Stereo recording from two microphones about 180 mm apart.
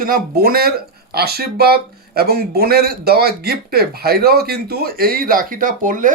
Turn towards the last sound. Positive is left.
turn(degrees=-50)  # may be behind; listen again after turning